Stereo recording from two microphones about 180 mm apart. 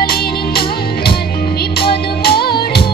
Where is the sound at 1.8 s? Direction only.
60° left (ahead or behind).